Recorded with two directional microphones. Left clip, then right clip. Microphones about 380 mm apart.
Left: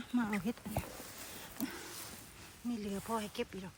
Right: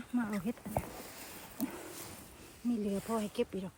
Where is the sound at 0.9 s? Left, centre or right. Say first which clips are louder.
Right 2 dB; right.